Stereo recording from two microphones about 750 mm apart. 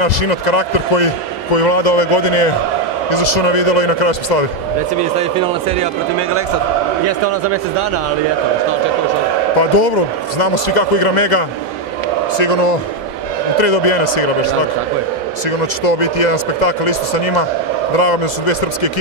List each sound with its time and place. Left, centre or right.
0.0 s speech: left
5.2 s speech: centre
9.6 s speech: left
15.8 s speech: left